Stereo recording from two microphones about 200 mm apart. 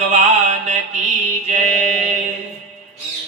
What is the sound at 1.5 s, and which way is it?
Speech, 35° right (ahead or behind).